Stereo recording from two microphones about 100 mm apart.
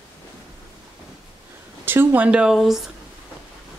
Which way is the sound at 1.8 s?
20° right (ahead or behind).